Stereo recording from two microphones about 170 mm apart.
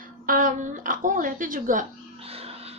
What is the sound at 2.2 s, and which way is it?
Wild animals, 35° right (ahead or behind).